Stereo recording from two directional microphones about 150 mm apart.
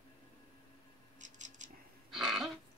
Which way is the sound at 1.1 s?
55° right (ahead or behind).